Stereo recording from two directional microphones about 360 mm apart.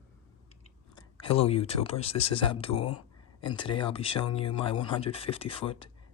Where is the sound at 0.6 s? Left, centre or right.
Centre.